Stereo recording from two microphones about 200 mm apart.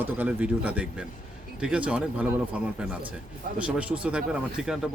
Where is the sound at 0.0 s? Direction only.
10° right (ahead or behind).